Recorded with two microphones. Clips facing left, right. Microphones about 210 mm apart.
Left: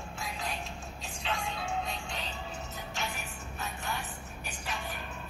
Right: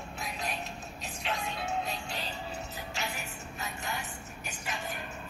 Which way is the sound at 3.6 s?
80° right.